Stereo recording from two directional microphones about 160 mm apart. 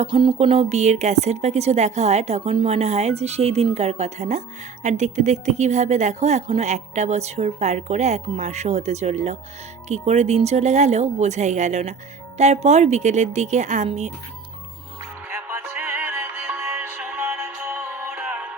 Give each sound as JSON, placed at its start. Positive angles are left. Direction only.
{"t": 0.0, "sound": "speech", "side_deg": -35}
{"t": 15.3, "sound": "music", "side_deg": -15}